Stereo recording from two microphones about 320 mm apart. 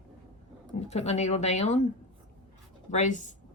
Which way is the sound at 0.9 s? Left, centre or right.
Centre.